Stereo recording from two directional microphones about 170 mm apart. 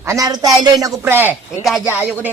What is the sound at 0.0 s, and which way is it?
Speech, 20° right (ahead or behind).